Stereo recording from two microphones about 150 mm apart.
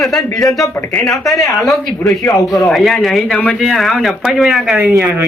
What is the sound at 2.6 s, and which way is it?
A man's voice, centre (ahead or behind).